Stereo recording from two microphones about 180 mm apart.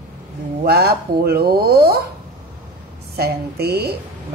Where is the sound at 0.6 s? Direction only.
60° right (ahead or behind).